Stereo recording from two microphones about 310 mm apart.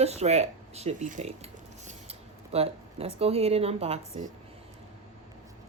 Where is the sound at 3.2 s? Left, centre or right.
Centre.